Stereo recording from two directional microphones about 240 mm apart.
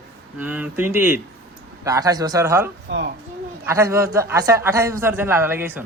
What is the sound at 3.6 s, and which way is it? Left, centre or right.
A man's voice, centre.